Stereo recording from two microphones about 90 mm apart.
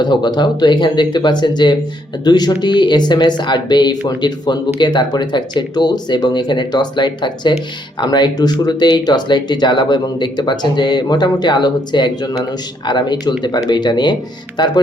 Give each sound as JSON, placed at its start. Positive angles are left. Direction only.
{"t": 0.0, "sound": "speech", "side_deg": 55}